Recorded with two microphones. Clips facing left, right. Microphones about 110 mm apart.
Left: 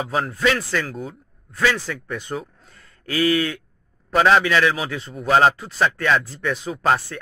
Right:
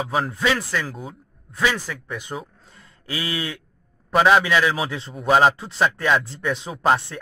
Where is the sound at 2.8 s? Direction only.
20° right (ahead or behind).